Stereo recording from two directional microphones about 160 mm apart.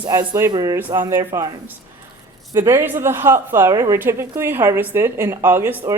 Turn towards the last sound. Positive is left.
turn(degrees=-15)  # may be behind; listen again after turning